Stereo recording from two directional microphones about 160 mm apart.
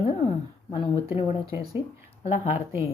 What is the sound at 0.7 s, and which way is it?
Speech, 30° left (ahead or behind).